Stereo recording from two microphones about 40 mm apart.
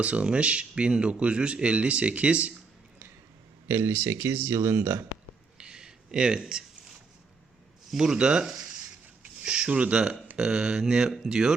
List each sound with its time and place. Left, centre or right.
0.0 s speech: right
3.7 s speech: right
5.5 s a sound: centre
7.9 s speech: centre
10.3 s speech: centre